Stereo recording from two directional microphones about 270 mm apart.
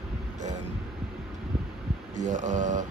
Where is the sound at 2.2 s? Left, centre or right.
Right.